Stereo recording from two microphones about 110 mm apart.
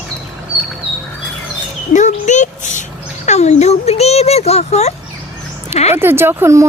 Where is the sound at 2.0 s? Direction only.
90° left.